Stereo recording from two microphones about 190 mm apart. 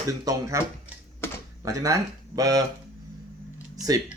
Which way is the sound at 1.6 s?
20° right (ahead or behind).